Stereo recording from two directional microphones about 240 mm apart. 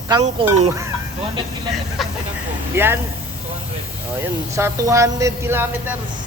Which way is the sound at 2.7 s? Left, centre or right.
Centre.